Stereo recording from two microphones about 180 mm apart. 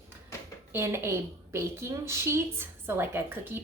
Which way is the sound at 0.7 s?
15° right (ahead or behind).